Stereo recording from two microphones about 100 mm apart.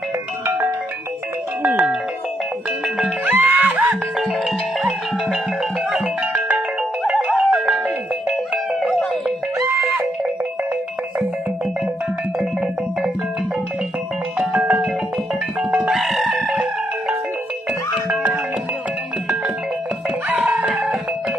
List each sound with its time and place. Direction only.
1.6 s music: 20° right (ahead or behind)
3.3 s music: 20° right (ahead or behind)
3.6 s music: 10° right (ahead or behind)
7.3 s music: 10° right (ahead or behind)
9.6 s music: 25° right (ahead or behind)
12.4 s music: 5° right (ahead or behind)
14.5 s music: 15° right (ahead or behind)
15.7 s music: 5° right (ahead or behind)
18.1 s music: 10° right (ahead or behind)
20.2 s music: 15° right (ahead or behind)